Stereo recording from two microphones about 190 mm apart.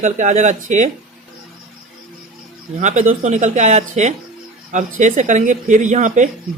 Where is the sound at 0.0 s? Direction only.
40° right (ahead or behind).